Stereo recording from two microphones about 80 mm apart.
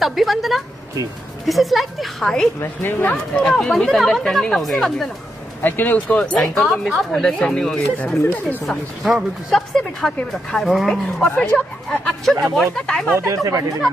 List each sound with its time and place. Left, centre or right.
0.0 s speech: centre
2.6 s speech: left
3.3 s speech: centre
5.6 s speech: left
6.5 s speech: centre
8.6 s speech: centre
11.2 s speech: centre
13.3 s speech: right